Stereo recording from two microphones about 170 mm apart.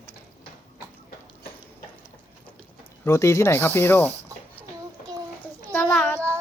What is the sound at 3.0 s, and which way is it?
Speech, 15° left (ahead or behind).